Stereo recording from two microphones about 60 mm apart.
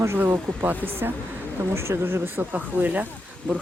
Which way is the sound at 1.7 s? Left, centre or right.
Right.